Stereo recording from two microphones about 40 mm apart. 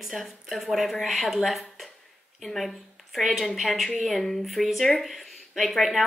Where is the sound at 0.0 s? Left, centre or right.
Centre.